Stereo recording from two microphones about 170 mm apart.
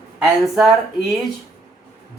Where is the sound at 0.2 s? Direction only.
5° right (ahead or behind).